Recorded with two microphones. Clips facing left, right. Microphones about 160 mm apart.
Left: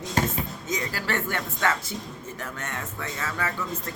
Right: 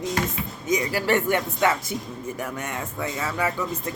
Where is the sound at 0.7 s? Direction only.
15° right (ahead or behind).